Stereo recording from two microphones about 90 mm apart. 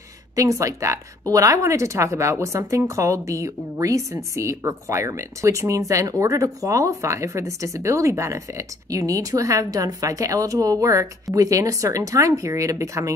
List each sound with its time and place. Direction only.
0.4 s a woman's voice: 35° right (ahead or behind)